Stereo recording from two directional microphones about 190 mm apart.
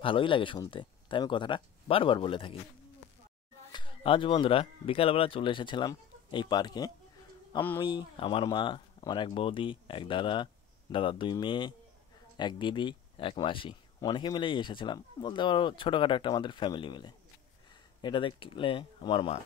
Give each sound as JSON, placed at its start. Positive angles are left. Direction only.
{"t": 0.0, "sound": "speech", "side_deg": 25}
{"t": 3.7, "sound": "speech", "side_deg": 25}